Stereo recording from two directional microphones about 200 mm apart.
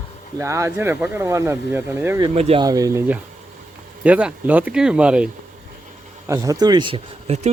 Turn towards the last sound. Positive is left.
turn(degrees=-30)  # may be behind; listen again after turning